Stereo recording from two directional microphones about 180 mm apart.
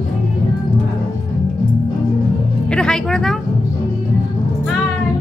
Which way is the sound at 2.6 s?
5° left (ahead or behind).